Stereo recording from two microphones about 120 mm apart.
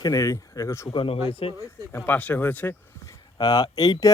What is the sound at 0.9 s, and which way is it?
Speech, 45° left (ahead or behind).